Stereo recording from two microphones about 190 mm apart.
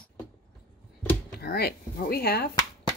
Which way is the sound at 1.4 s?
55° left (ahead or behind).